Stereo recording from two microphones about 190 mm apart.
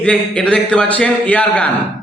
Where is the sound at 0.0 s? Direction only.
5° left (ahead or behind).